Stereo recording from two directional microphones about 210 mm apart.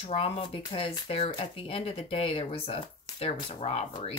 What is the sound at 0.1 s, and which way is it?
Speech, 25° left (ahead or behind).